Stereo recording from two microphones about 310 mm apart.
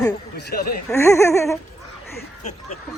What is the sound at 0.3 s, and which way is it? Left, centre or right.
Speech, left.